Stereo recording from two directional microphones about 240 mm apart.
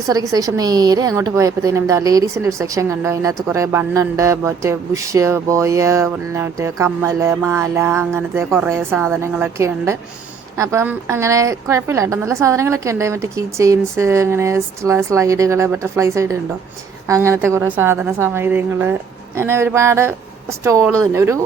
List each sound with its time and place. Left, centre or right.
0.1 s a woman's voice: centre